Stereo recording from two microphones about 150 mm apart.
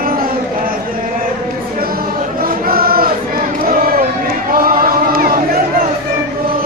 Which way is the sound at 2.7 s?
85° right.